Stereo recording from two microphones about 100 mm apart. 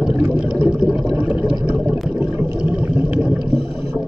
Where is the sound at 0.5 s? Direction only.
10° right (ahead or behind).